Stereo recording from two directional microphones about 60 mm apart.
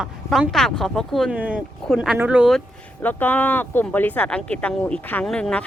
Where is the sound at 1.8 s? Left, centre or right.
Centre.